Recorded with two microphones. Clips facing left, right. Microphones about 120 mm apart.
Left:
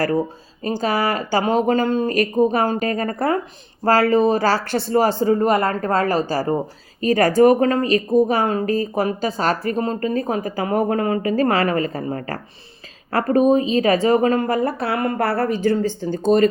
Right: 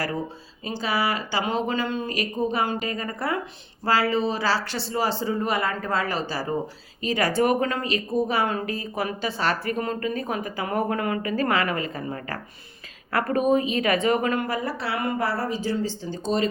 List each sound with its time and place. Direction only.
0.6 s a woman's voice: 45° left (ahead or behind)